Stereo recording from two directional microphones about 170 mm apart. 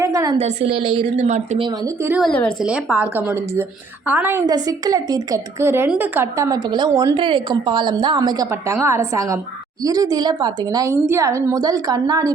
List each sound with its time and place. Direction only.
0.0 s a sound: 20° right (ahead or behind)
0.3 s a woman's voice: 35° right (ahead or behind)
1.6 s a woman's voice: 20° right (ahead or behind)
2.2 s a woman's voice: 5° left (ahead or behind)
2.6 s a woman's voice: 5° right (ahead or behind)